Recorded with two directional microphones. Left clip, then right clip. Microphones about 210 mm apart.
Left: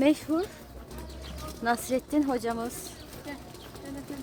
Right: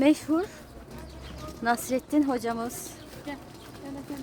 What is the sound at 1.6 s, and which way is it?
Speech, 5° right (ahead or behind).